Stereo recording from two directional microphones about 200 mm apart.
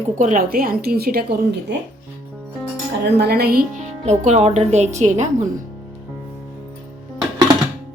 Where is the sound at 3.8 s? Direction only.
35° right (ahead or behind).